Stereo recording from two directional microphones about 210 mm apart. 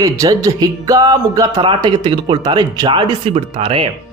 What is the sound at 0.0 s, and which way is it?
Speech, 15° right (ahead or behind).